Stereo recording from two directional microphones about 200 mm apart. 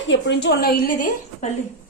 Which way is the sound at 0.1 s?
60° left (ahead or behind).